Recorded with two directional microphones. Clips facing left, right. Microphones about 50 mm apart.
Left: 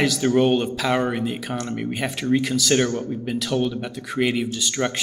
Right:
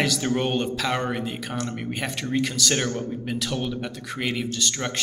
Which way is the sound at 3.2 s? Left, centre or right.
Centre.